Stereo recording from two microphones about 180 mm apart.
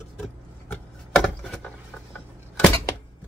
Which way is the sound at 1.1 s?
5° left (ahead or behind).